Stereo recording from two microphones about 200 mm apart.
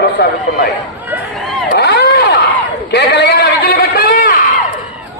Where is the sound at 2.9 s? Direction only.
55° left (ahead or behind).